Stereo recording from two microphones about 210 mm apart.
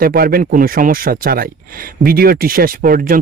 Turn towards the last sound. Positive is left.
turn(degrees=-40)  # may be behind; listen again after turning